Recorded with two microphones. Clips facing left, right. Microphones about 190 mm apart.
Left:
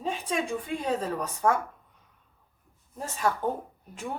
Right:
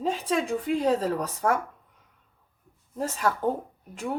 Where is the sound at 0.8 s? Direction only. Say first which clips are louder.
Right 5 dB; 35° right (ahead or behind).